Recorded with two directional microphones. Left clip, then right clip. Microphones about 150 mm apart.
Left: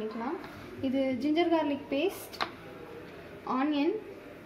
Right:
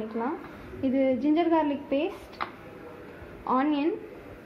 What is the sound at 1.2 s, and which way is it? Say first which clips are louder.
Speech: right 4 dB; 35° right (ahead or behind).